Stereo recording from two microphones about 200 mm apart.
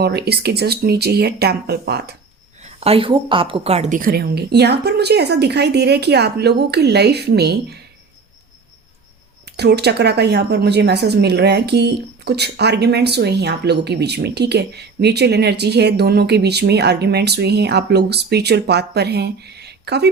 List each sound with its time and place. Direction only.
0.0 s speech: 55° right (ahead or behind)
2.6 s a woman's voice: 30° right (ahead or behind); by 7.8 s 55° right (ahead or behind)
9.5 s a woman's voice: 55° right (ahead or behind)